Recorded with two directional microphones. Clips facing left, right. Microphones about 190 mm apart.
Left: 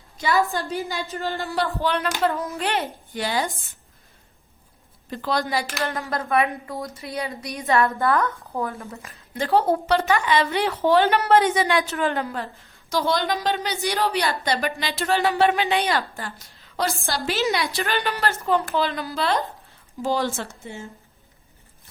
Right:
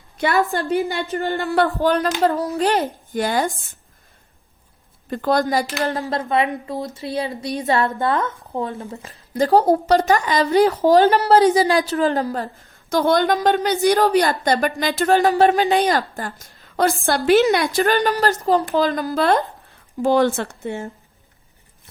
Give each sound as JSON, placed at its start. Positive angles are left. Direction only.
{"t": 0.2, "sound": "a woman's voice", "side_deg": -60}
{"t": 5.1, "sound": "a woman's voice", "side_deg": -50}
{"t": 12.9, "sound": "a woman's voice", "side_deg": -50}